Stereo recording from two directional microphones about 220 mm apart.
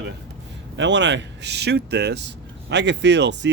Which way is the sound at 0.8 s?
55° right (ahead or behind).